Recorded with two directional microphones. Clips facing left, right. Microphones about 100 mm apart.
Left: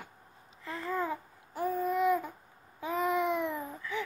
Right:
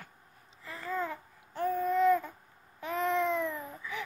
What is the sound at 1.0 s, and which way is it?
Babbling, 10° left (ahead or behind).